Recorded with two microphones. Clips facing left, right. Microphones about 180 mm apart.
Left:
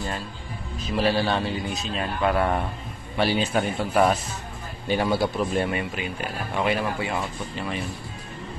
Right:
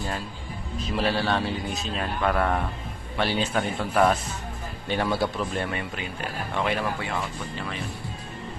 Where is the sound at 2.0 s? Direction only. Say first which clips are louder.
Left 2 dB; 10° left (ahead or behind).